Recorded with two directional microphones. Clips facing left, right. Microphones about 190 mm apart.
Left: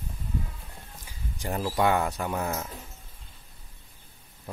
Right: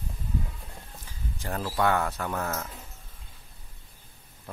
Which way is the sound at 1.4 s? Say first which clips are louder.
Left 2 dB; 15° left (ahead or behind).